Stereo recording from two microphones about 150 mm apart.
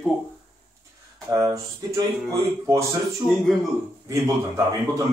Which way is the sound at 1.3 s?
20° right (ahead or behind).